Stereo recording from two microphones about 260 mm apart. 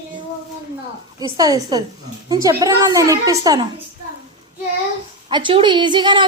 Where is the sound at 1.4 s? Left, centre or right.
Centre.